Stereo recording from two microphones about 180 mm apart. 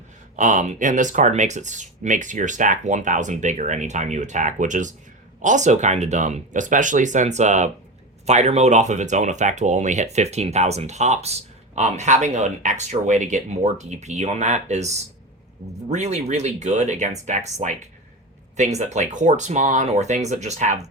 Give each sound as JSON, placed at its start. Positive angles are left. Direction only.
{"t": 0.3, "sound": "speech", "side_deg": -45}